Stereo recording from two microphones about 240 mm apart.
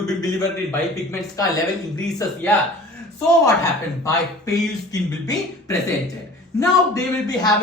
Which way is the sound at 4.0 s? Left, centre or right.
Centre.